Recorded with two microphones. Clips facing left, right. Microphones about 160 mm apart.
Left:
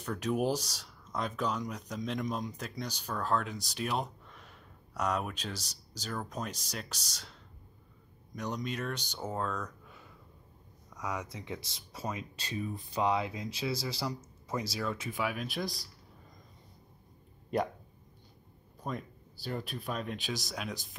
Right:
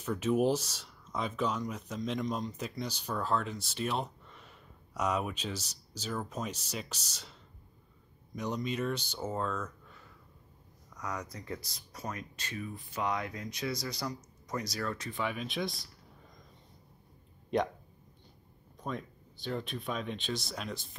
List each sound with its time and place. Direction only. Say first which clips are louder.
0.0 s speech: right 3 dB; centre (ahead or behind)
8.5 s speech: right 5 dB; centre (ahead or behind)
11.0 s speech: left 1 dB; 5° left (ahead or behind)
11.7 s speech: left 2 dB; 25° left (ahead or behind)
14.8 s speech: left 1 dB; 10° left (ahead or behind)
17.5 s speech: right 1 dB; 5° left (ahead or behind)
18.9 s speech: even; 5° left (ahead or behind)